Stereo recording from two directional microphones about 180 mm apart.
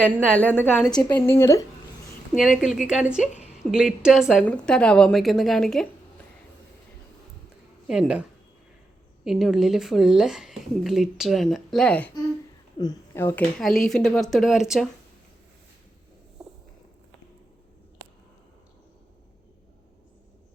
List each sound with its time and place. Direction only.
0.3 s a woman's voice: 10° left (ahead or behind)
2.4 s speech: 5° right (ahead or behind)
7.9 s speech: 5° right (ahead or behind)
12.8 s speech: 20° left (ahead or behind)
13.6 s speech: centre (ahead or behind)